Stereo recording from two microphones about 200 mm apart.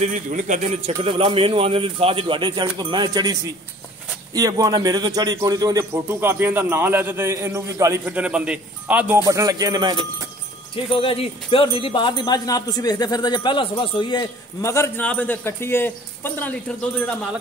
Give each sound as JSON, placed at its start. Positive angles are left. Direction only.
{"t": 0.0, "sound": "a man's voice", "side_deg": -40}
{"t": 10.9, "sound": "speech", "side_deg": 25}